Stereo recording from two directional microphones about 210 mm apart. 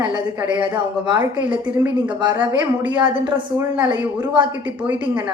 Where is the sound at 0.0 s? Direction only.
20° right (ahead or behind).